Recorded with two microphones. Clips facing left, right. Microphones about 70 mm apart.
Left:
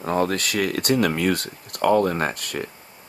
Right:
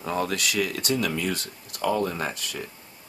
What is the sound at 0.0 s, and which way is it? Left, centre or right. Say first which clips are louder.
Speech: left 5 dB; left.